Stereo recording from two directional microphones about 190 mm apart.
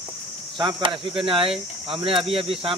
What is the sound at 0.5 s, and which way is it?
Speech, 25° right (ahead or behind).